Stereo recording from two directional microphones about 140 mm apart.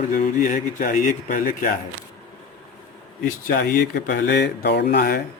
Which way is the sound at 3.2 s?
90° left.